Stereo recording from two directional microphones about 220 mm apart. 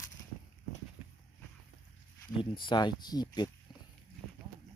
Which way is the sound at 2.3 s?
20° left (ahead or behind).